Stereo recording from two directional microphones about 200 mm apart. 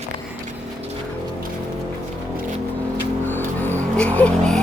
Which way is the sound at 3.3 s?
10° left (ahead or behind).